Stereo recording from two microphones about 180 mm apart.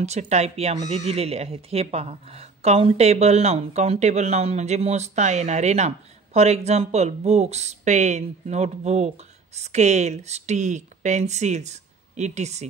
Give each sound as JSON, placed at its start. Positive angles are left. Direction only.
{"t": 0.0, "sound": "speech", "side_deg": -40}